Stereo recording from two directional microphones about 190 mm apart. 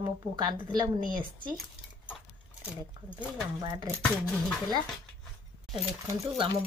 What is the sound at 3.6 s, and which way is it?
Speech, 15° right (ahead or behind).